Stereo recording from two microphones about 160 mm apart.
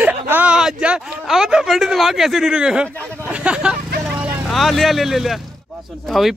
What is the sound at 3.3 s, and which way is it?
Vehicle, 5° right (ahead or behind).